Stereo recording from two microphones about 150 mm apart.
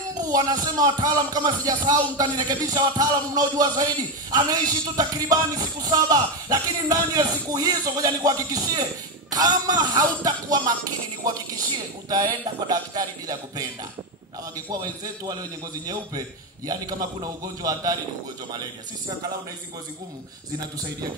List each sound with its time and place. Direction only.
0.3 s speech: 25° right (ahead or behind)
14.7 s speech: 25° right (ahead or behind)
16.6 s speech: 25° right (ahead or behind)